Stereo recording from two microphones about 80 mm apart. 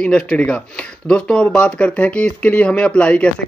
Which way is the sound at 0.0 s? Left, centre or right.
Centre.